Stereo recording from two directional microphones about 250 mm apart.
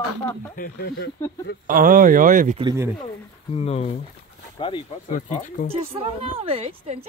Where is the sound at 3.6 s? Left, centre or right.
Left.